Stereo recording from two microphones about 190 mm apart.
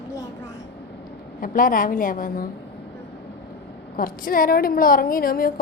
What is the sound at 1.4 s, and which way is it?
A woman's voice, 45° left (ahead or behind).